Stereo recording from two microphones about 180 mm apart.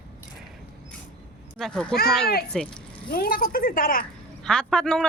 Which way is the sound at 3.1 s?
55° left (ahead or behind).